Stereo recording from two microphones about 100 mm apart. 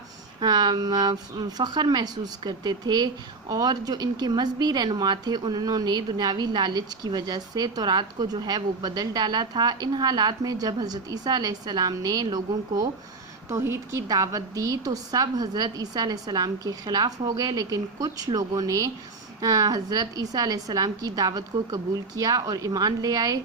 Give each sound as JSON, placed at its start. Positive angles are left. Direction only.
{"t": 0.3, "sound": "a woman's voice", "side_deg": -45}
{"t": 13.5, "sound": "a woman's voice", "side_deg": -25}